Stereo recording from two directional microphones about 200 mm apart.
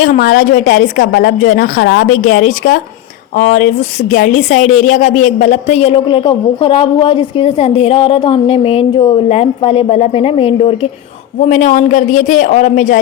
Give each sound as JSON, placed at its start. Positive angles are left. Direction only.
{"t": 0.0, "sound": "a woman's voice", "side_deg": 45}